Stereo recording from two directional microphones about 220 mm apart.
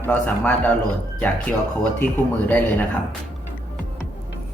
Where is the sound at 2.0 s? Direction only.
10° left (ahead or behind).